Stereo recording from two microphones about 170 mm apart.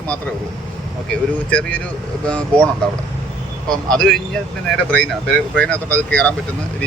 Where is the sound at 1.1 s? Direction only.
5° left (ahead or behind).